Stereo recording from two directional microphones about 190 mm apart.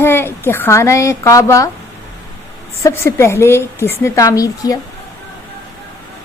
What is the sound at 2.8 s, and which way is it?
A woman's voice, 15° left (ahead or behind).